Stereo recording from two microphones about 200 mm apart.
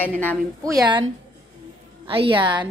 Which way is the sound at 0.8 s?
25° right (ahead or behind).